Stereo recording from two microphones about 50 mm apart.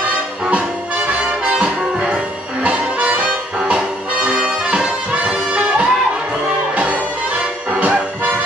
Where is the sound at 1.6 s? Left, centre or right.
Right.